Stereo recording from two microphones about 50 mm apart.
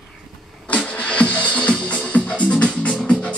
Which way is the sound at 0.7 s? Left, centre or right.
Left.